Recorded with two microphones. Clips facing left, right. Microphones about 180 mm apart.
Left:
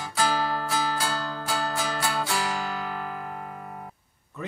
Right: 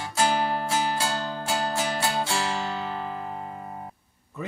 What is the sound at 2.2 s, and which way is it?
Guitar, 25° right (ahead or behind).